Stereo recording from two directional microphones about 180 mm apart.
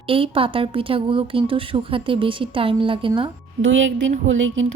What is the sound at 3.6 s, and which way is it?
Speech, 90° right.